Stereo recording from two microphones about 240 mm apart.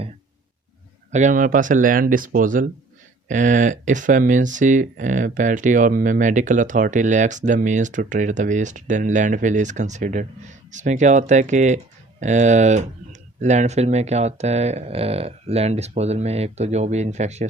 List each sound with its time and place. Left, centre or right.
1.1 s speech: right